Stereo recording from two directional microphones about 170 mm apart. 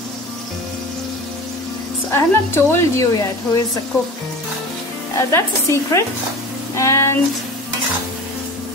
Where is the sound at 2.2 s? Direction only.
15° left (ahead or behind).